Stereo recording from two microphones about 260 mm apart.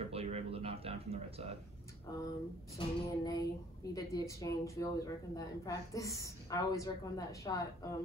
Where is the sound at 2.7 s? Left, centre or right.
Centre.